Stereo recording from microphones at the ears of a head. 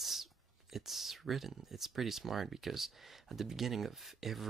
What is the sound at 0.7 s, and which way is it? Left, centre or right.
Speech, right.